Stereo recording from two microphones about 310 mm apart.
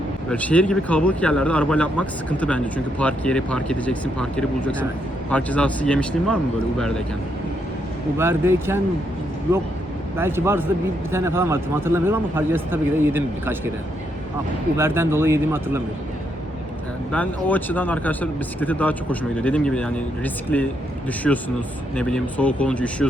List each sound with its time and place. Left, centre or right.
0.3 s speech: centre
8.2 s speech: centre
10.2 s speech: centre
14.8 s speech: centre
17.1 s speech: centre